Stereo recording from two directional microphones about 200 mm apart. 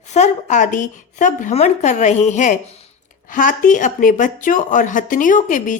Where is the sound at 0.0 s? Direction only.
35° left (ahead or behind).